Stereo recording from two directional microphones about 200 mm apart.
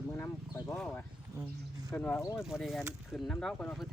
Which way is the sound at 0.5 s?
15° left (ahead or behind).